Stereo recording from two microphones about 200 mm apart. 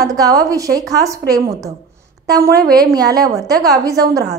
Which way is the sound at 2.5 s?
50° right (ahead or behind).